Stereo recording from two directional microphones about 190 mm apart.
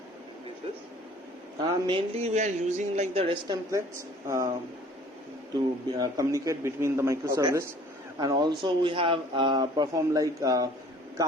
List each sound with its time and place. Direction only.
1.6 s speech: 25° right (ahead or behind)
3.7 s a man's voice: 15° right (ahead or behind)
6.0 s a man's voice: 20° right (ahead or behind)